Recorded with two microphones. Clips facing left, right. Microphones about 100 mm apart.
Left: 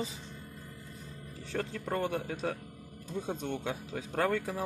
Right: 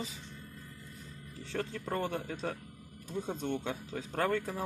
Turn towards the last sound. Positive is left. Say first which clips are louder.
# left 1 dB
turn(degrees=0)  # may be behind; listen again after turning